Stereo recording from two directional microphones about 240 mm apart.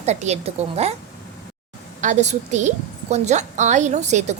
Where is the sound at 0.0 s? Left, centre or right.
Right.